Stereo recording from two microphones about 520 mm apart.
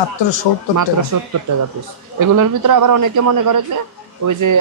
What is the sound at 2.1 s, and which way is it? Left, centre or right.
Speech, right.